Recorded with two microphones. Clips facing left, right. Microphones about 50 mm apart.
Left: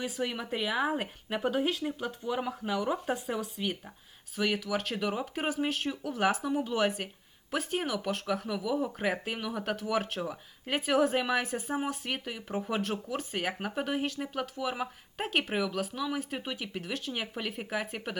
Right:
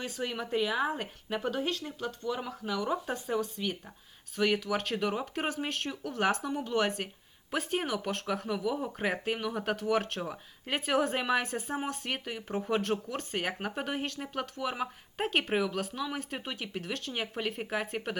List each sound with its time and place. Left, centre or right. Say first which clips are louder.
0.0 s speech: left 2 dB; centre